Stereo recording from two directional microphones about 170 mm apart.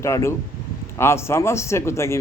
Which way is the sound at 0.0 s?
15° left (ahead or behind).